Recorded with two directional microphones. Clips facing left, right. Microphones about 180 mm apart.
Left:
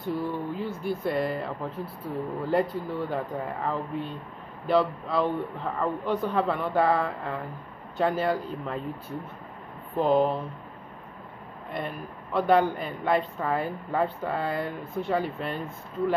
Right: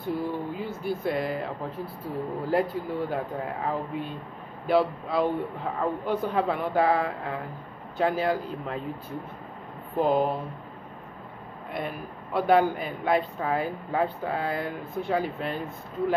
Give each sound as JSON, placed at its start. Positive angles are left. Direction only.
{"t": 0.0, "sound": "a man's voice", "side_deg": 0}
{"t": 9.9, "sound": "a man's voice", "side_deg": -5}
{"t": 11.7, "sound": "a man's voice", "side_deg": -5}